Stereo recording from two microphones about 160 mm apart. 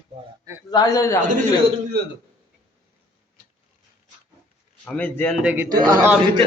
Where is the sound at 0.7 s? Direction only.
20° left (ahead or behind).